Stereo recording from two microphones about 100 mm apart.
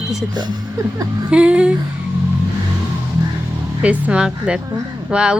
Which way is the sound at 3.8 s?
10° right (ahead or behind).